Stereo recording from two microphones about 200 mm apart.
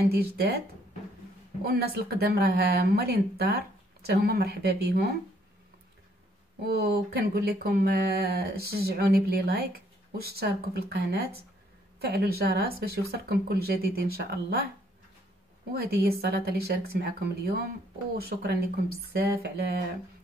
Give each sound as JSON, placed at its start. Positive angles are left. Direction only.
{"t": 0.1, "sound": "speech", "side_deg": -50}
{"t": 1.7, "sound": "speech", "side_deg": -50}
{"t": 6.6, "sound": "speech", "side_deg": -50}
{"t": 15.7, "sound": "speech", "side_deg": -50}
{"t": 19.1, "sound": "speech", "side_deg": -50}